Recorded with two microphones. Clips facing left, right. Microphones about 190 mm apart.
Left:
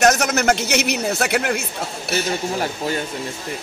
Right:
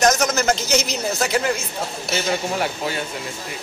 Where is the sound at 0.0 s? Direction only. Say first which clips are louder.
Left 1 dB; 65° left (ahead or behind).